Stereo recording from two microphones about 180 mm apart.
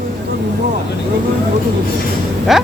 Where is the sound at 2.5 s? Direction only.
Centre (ahead or behind).